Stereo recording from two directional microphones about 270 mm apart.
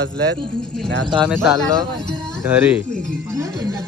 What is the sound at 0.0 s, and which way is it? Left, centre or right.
Speech, right.